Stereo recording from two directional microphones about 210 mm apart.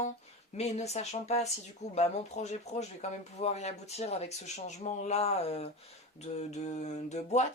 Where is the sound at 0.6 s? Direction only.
30° left (ahead or behind).